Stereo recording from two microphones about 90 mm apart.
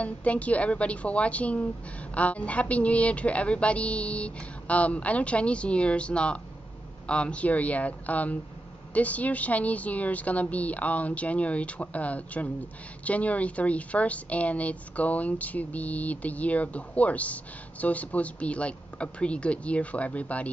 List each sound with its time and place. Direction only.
0.0 s a woman's voice: 15° left (ahead or behind)